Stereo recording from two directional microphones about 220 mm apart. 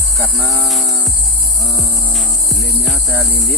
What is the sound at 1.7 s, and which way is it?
Music, 15° left (ahead or behind).